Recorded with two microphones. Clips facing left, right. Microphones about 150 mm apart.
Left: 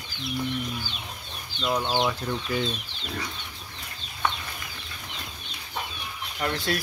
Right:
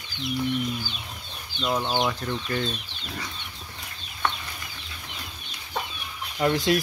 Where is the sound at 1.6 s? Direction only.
Centre (ahead or behind).